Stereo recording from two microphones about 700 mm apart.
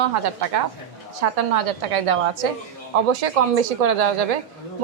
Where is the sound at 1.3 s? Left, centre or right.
Right.